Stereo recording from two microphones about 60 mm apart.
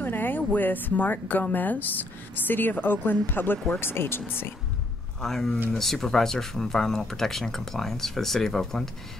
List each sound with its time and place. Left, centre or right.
0.0 s speech: left
5.2 s speech: centre